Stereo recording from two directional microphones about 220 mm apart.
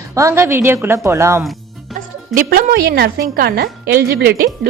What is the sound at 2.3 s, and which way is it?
A woman's voice, 40° right (ahead or behind).